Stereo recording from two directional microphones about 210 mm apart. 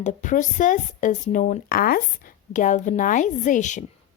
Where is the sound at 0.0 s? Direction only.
35° left (ahead or behind).